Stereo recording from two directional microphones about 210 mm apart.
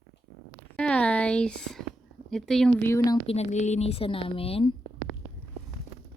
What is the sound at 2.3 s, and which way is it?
Speech, centre (ahead or behind).